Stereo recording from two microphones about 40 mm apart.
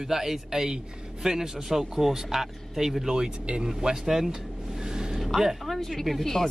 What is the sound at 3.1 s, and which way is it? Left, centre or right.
Speech, right.